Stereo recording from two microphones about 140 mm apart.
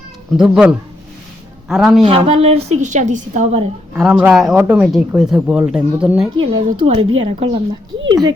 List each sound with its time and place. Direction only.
0.3 s speech: 5° right (ahead or behind)
2.0 s a woman's voice: 45° right (ahead or behind)
3.9 s speech: 5° right (ahead or behind)
6.3 s a woman's voice: 35° right (ahead or behind)